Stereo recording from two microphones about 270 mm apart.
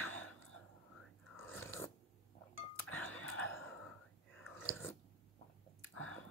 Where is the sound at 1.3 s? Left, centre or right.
Centre.